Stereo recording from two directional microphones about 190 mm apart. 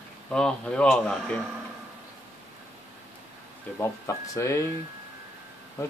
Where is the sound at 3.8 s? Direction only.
15° left (ahead or behind).